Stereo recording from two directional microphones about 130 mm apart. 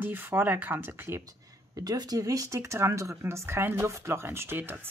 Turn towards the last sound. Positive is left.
turn(degrees=-15)  # may be behind; listen again after turning